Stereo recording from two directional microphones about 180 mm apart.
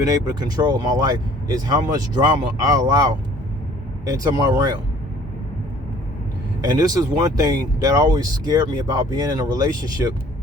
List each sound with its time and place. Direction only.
0.0 s speech: 20° right (ahead or behind)
6.6 s speech: 20° right (ahead or behind)